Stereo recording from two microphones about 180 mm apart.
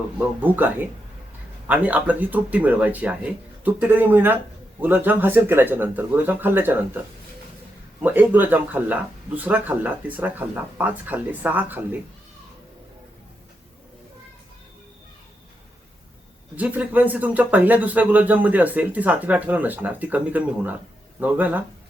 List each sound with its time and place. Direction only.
0.4 s speech: 10° right (ahead or behind)
8.0 s speech: 10° right (ahead or behind)
16.6 s speech: 10° right (ahead or behind)